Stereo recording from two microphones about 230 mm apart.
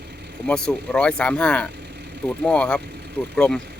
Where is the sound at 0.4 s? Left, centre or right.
Centre.